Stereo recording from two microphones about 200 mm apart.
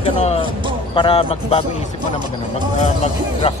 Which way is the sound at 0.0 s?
30° left (ahead or behind).